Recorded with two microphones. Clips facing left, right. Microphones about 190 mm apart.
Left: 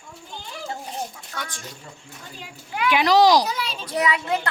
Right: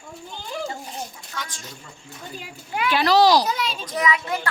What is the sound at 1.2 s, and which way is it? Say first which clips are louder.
Speech: left 1 dB; 55° left (ahead or behind).